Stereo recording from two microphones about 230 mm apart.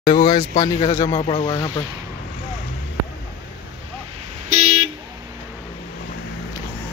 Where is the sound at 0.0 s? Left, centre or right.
Left.